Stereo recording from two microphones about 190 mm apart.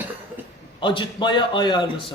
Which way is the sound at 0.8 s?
25° left (ahead or behind).